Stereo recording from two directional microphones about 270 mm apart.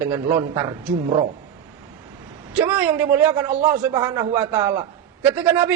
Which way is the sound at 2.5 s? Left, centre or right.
Centre.